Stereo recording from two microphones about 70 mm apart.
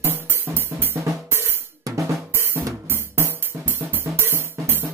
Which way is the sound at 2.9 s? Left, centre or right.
Right.